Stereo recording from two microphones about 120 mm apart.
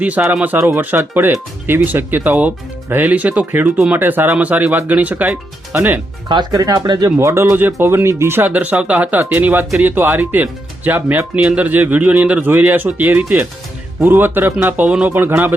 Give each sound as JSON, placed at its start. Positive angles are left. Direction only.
{"t": 0.0, "sound": "speech", "side_deg": -10}
{"t": 0.4, "sound": "speech", "side_deg": -20}
{"t": 6.2, "sound": "speech", "side_deg": -35}